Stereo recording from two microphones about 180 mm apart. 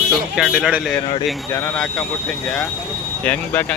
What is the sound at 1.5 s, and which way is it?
Speech, 10° left (ahead or behind).